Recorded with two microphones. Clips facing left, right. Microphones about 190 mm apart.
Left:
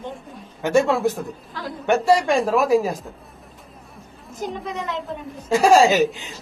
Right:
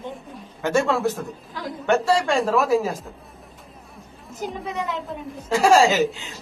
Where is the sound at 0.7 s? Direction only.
15° left (ahead or behind).